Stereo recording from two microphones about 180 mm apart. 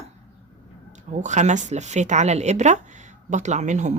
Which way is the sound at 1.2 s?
40° right (ahead or behind).